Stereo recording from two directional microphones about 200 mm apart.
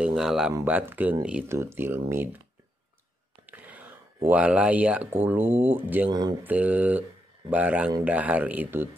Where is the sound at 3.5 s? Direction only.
10° right (ahead or behind).